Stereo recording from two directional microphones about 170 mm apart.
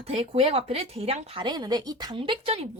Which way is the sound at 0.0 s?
35° right (ahead or behind).